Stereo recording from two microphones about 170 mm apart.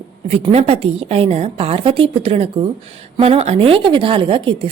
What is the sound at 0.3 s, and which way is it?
A woman's voice, 35° right (ahead or behind).